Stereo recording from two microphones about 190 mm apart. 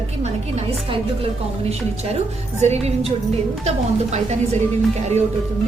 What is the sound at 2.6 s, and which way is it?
A woman's voice, 35° right (ahead or behind).